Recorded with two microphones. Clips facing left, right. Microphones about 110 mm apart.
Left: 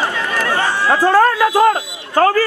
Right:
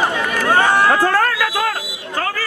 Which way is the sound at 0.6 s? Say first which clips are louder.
Right 4 dB; 55° right (ahead or behind).